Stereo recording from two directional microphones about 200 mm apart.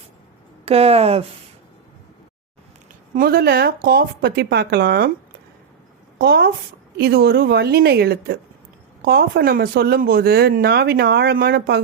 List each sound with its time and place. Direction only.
0.6 s speech: 30° right (ahead or behind)
3.2 s speech: 50° right (ahead or behind)
6.1 s speech: 55° right (ahead or behind)